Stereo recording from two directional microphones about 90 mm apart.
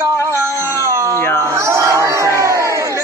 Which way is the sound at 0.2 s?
30° right (ahead or behind).